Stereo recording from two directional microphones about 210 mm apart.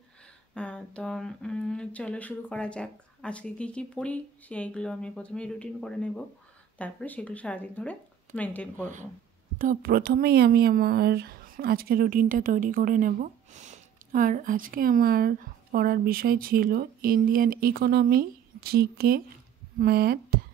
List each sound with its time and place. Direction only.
0.6 s speech: 5° left (ahead or behind)
9.6 s speech: 40° right (ahead or behind)